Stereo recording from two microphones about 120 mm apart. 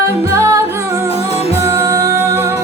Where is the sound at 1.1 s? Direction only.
60° left (ahead or behind).